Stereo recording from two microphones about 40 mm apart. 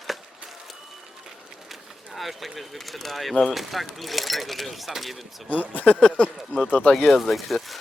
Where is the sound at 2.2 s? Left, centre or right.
Centre.